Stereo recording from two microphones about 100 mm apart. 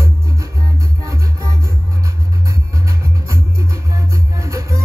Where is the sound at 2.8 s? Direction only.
35° right (ahead or behind).